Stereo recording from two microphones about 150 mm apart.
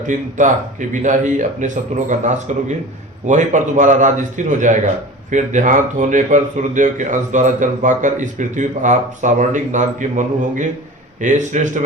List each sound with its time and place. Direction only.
0.1 s speech: 55° right (ahead or behind)